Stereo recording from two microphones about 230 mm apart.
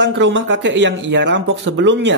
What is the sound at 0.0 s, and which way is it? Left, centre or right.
Speech, right.